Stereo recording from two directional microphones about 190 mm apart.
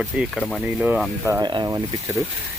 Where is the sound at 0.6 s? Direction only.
5° right (ahead or behind).